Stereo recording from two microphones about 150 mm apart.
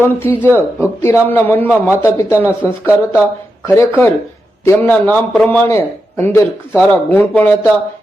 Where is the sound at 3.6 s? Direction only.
15° left (ahead or behind).